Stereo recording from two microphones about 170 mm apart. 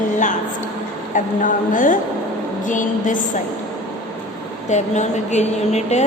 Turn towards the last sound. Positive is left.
turn(degrees=40)  # may be behind; listen again after turning